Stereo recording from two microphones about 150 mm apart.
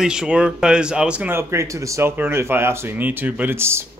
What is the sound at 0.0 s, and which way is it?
Speech, 5° right (ahead or behind).